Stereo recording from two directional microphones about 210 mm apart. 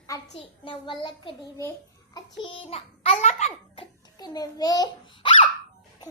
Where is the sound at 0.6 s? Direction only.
25° left (ahead or behind).